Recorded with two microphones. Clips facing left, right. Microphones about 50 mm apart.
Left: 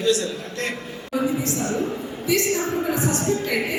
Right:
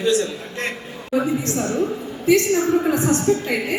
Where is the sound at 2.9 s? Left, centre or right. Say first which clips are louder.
Right 4 dB; right.